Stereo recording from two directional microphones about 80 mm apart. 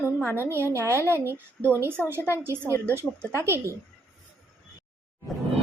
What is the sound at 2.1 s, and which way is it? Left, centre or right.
Speech, left.